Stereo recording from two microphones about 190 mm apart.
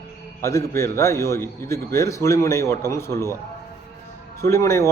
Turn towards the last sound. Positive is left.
turn(degrees=15)  # may be behind; listen again after turning